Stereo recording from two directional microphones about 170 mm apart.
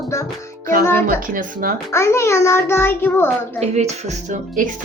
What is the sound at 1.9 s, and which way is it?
A child's voice, 15° left (ahead or behind).